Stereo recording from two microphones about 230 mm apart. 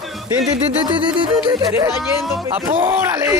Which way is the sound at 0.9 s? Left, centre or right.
Right.